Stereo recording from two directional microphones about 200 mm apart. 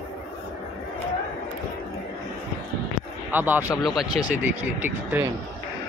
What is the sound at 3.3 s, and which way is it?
Speech, 10° right (ahead or behind).